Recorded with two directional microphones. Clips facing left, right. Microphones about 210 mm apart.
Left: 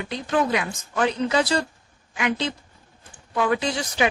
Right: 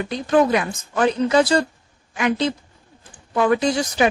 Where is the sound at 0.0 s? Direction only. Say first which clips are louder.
Right 6 dB; 45° right (ahead or behind).